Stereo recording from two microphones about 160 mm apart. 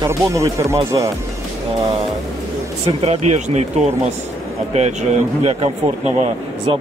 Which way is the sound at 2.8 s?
45° right (ahead or behind).